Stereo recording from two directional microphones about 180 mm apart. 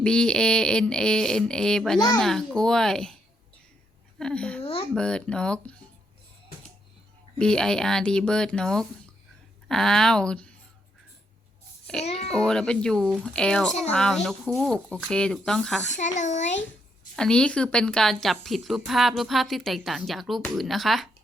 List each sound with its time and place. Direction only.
0.0 s a woman's voice: 5° left (ahead or behind)
4.2 s a woman's voice: 5° left (ahead or behind)
7.3 s a woman's voice: 5° left (ahead or behind)
12.0 s a child's voice: 35° left (ahead or behind)
12.5 s a woman's voice: 5° left (ahead or behind)
16.0 s a child's voice: 40° left (ahead or behind)
17.2 s a woman's voice: 5° left (ahead or behind)